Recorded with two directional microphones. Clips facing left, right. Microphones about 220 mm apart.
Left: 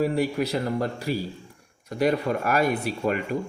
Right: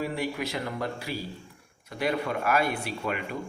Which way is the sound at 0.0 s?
40° left (ahead or behind).